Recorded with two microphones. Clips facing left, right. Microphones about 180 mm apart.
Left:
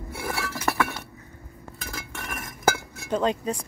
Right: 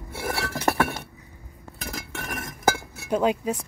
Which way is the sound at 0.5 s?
35° right (ahead or behind).